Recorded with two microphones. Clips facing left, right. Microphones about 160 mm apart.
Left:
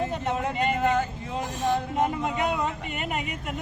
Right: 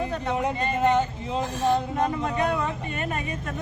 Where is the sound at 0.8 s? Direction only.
20° right (ahead or behind).